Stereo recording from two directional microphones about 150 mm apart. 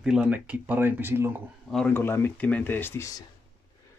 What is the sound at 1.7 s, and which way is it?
Speech, 5° left (ahead or behind).